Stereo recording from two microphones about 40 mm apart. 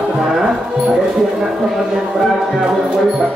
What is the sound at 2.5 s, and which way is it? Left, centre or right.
Speech, centre.